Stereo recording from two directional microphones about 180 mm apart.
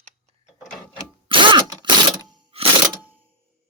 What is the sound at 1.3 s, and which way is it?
Mechanisms, 30° right (ahead or behind).